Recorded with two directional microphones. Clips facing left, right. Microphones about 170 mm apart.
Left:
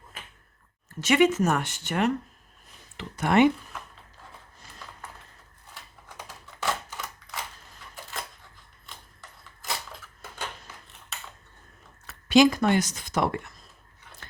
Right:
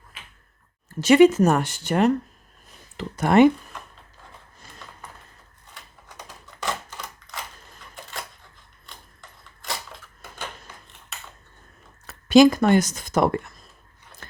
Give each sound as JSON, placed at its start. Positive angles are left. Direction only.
{"t": 1.0, "sound": "speech", "side_deg": -35}
{"t": 6.1, "sound": "typewriter", "side_deg": 5}
{"t": 12.0, "sound": "speech", "side_deg": -40}